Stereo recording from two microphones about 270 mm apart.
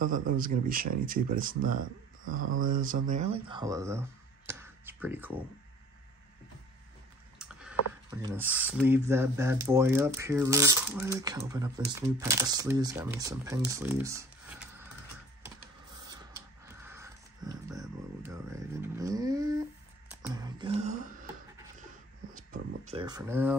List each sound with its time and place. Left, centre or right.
0.4 s speech: right; by 5.4 s centre
7.3 s typing: centre
8.2 s speech: centre
16.1 s a sound: centre
22.3 s a sound: right
23.0 s speech: centre